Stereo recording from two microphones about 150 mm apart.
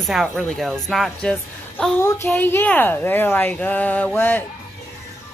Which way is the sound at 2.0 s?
15° left (ahead or behind).